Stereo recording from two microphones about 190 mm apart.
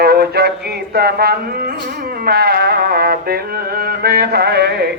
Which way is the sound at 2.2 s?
55° right (ahead or behind).